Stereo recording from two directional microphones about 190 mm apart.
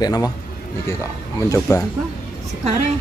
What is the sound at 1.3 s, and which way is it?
Speech, 15° left (ahead or behind).